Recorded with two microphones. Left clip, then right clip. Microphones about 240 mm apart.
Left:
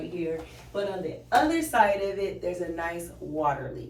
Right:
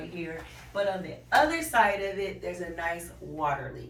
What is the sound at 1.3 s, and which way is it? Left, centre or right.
A woman's voice, centre.